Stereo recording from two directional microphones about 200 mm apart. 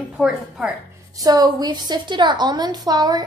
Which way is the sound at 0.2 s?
5° right (ahead or behind).